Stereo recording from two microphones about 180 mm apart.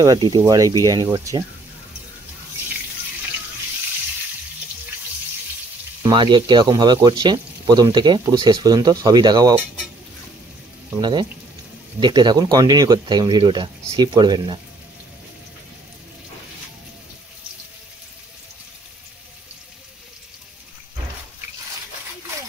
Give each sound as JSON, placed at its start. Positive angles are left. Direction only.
{"t": 0.0, "sound": "speech", "side_deg": -20}
{"t": 6.0, "sound": "speech", "side_deg": -25}
{"t": 11.0, "sound": "speech", "side_deg": -25}